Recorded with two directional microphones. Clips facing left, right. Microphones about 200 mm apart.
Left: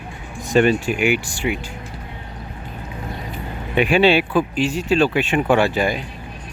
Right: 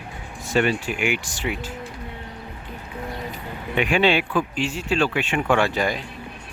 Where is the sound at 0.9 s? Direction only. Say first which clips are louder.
Left 6 dB; 10° left (ahead or behind).